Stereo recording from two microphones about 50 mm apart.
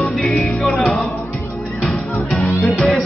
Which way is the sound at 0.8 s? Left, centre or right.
Left.